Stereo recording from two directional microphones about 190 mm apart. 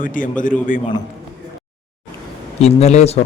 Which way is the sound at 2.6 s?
35° left (ahead or behind).